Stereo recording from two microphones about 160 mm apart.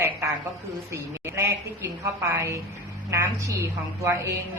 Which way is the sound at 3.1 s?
20° right (ahead or behind).